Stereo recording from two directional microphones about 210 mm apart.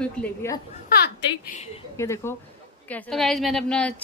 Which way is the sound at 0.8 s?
45° left (ahead or behind).